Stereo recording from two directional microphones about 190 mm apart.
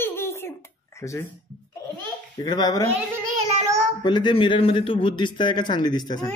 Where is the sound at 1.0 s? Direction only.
15° left (ahead or behind).